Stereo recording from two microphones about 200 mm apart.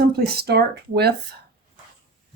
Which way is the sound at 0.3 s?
55° right (ahead or behind).